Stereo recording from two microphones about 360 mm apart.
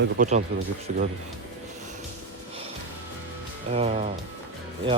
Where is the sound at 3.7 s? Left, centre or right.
Centre.